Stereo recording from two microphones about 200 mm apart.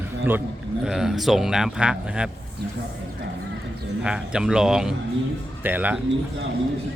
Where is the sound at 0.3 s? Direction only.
10° right (ahead or behind).